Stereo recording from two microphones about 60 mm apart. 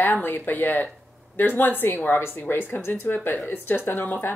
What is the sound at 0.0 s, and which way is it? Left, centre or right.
Speech, left.